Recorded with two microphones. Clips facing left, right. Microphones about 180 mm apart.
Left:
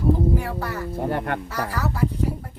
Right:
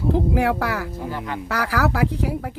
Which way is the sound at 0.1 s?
80° right.